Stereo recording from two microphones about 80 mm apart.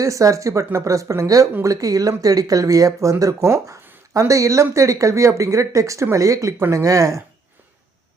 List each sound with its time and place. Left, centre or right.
0.0 s speech: right